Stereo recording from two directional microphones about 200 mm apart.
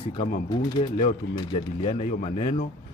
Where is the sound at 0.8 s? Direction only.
30° left (ahead or behind).